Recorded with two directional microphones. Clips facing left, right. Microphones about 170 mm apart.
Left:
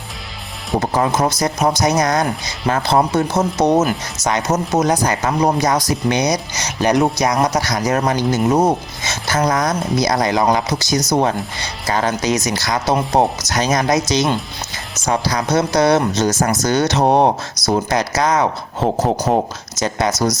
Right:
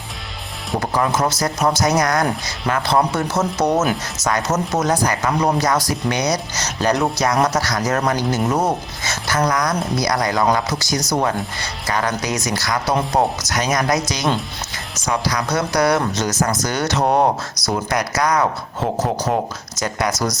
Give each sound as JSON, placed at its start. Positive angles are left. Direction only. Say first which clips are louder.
{"t": 0.8, "sound": "speech", "louder": "left 2 dB", "side_deg": 25}